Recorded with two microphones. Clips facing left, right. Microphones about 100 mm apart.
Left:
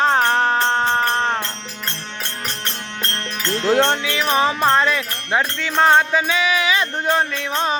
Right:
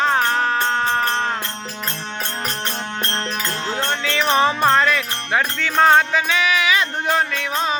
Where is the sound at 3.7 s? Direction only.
65° left (ahead or behind).